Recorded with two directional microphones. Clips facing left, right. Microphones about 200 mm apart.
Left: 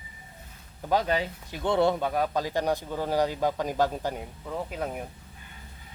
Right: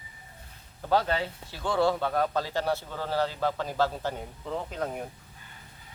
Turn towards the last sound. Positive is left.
turn(degrees=10)  # may be behind; listen again after turning